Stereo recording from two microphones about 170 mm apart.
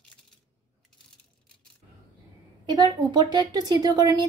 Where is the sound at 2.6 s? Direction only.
25° right (ahead or behind).